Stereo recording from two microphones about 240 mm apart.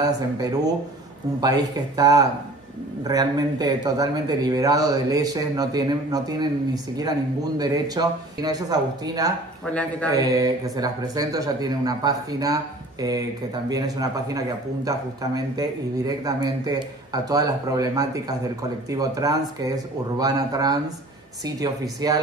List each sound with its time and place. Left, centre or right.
0.0 s speech: centre
9.7 s speech: centre
10.0 s speech: centre
13.7 s speech: centre